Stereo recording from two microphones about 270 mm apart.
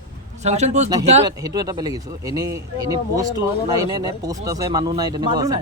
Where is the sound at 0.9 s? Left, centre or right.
Centre.